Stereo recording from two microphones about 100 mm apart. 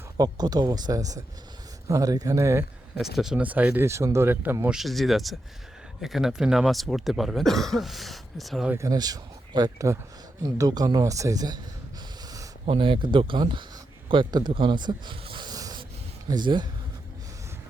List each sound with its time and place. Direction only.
0.2 s speech: 45° right (ahead or behind)
3.0 s speech: 5° right (ahead or behind)
3.4 s speech: 15° right (ahead or behind)
3.8 s speech: 30° right (ahead or behind)
4.7 s speech: centre (ahead or behind)
8.8 s speech: 40° right (ahead or behind)
12.6 s speech: 65° right (ahead or behind); by 14.5 s 45° right (ahead or behind)
14.5 s a sound: 55° right (ahead or behind)
16.3 s speech: 50° right (ahead or behind)